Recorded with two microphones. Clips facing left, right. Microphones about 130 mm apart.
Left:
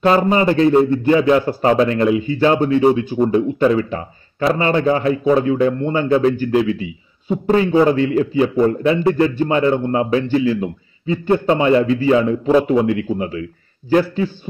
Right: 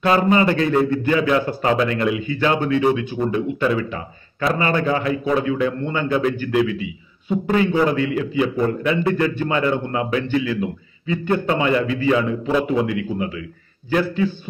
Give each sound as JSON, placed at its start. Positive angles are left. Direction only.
{"t": 0.0, "sound": "a man's voice", "side_deg": 30}